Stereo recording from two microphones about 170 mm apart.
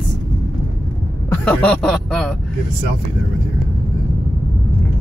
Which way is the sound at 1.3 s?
10° left (ahead or behind).